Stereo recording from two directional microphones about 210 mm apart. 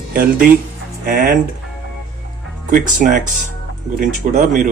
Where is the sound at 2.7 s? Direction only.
40° right (ahead or behind).